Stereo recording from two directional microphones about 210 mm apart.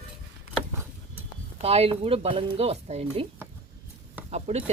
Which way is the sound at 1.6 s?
30° right (ahead or behind).